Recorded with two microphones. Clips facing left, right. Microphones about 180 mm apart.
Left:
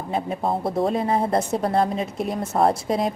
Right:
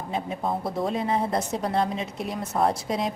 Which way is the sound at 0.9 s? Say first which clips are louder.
Left 2 dB; 50° left (ahead or behind).